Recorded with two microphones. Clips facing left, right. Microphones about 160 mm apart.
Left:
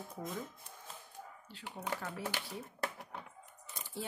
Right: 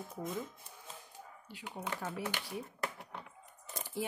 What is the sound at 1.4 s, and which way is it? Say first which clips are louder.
Speech: even; 15° right (ahead or behind).